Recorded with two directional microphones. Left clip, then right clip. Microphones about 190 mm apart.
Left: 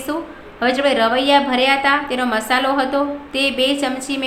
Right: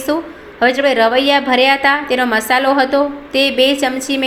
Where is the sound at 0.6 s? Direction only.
15° right (ahead or behind).